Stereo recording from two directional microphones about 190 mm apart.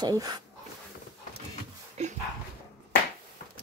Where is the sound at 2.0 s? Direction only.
35° right (ahead or behind).